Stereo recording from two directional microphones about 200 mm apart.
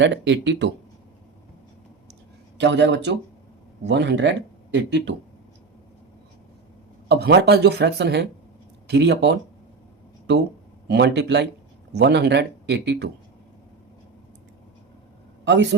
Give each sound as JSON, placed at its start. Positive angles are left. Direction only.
{"t": 0.0, "sound": "speech", "side_deg": -65}
{"t": 2.6, "sound": "speech", "side_deg": -60}
{"t": 7.1, "sound": "speech", "side_deg": -55}
{"t": 10.8, "sound": "speech", "side_deg": -55}
{"t": 15.4, "sound": "a woman's voice", "side_deg": -60}